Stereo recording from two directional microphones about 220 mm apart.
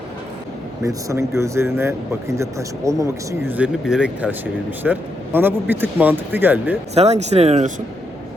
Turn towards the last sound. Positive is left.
turn(degrees=-30)  # may be behind; listen again after turning